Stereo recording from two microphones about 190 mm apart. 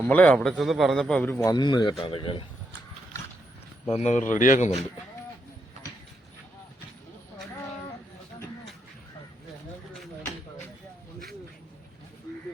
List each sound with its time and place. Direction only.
0.0 s a man's voice: 10° left (ahead or behind)
1.5 s speech: 20° left (ahead or behind)
3.8 s speech: 35° left (ahead or behind)